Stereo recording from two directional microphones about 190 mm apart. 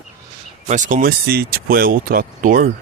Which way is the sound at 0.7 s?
40° right (ahead or behind).